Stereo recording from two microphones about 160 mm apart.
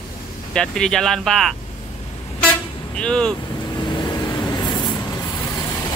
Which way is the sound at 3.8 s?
25° left (ahead or behind).